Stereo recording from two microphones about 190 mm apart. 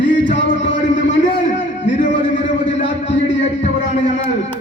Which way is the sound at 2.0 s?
40° left (ahead or behind).